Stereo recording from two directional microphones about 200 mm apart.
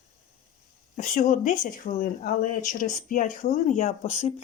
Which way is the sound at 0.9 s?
40° left (ahead or behind).